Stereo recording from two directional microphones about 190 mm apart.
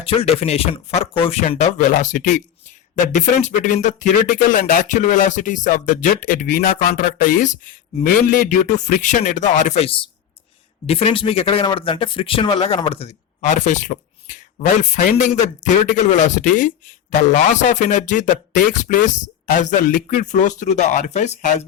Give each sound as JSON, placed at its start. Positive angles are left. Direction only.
{"t": 0.0, "sound": "speech", "side_deg": 30}